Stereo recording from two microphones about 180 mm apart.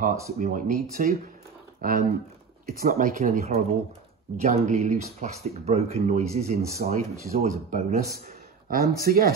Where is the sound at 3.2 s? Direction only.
40° right (ahead or behind).